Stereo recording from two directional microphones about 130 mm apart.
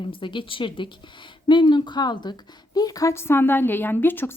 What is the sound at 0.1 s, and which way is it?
A woman's voice, 40° left (ahead or behind).